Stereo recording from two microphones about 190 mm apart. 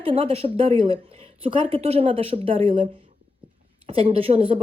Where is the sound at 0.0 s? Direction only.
30° right (ahead or behind).